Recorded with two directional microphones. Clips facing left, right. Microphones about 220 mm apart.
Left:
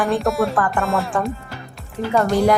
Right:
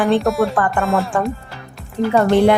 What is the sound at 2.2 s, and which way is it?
Speech, 25° right (ahead or behind).